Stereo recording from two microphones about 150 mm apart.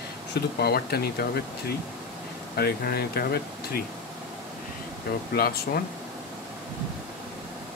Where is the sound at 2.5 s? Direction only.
90° left.